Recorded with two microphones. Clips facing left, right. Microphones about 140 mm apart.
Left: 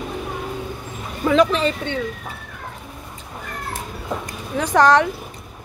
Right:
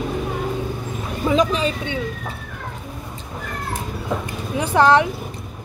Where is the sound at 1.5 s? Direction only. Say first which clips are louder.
Left 1 dB; 10° right (ahead or behind).